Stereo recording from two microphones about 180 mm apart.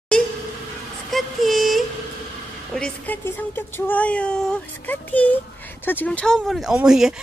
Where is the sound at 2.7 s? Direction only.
5° left (ahead or behind).